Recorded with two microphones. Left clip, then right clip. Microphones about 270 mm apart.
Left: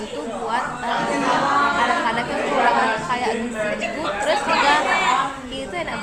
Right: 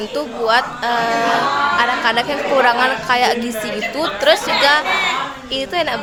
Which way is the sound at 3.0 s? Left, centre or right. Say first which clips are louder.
Right 7 dB; right.